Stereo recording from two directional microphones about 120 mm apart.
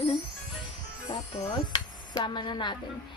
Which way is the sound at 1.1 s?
50° left (ahead or behind).